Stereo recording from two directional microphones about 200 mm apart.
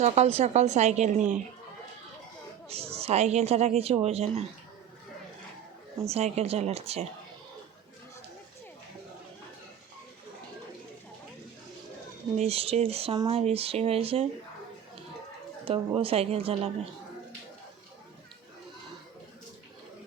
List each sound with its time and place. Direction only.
0.0 s speech: 30° right (ahead or behind)
2.6 s speech: 30° right (ahead or behind)
6.1 s speech: 30° right (ahead or behind)
12.4 s speech: 30° right (ahead or behind)
15.6 s speech: 25° right (ahead or behind)